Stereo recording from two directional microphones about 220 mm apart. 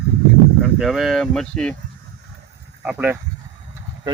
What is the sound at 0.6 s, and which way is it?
Speech, centre (ahead or behind).